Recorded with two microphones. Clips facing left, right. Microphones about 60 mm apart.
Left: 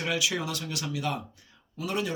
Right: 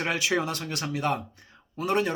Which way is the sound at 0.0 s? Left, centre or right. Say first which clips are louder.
Right 3 dB; right.